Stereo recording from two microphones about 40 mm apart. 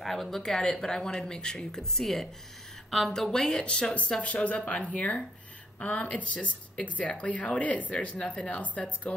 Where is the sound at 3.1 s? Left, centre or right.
Centre.